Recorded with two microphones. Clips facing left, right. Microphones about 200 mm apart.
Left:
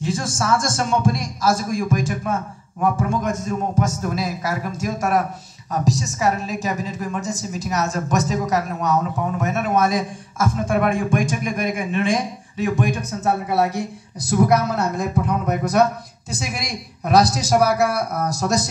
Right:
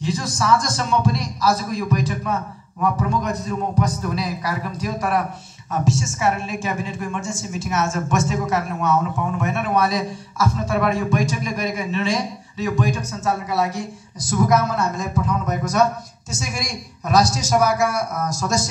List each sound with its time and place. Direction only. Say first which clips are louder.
0.0 s a sound: left 1 dB; 50° left (ahead or behind)
0.4 s a woman's voice: right 1 dB; 50° left (ahead or behind)
17.4 s a man's voice: left 1 dB; 35° left (ahead or behind)
17.7 s a woman's voice: left 1 dB; 60° left (ahead or behind)
18.2 s a man's voice: left 2 dB; 35° left (ahead or behind)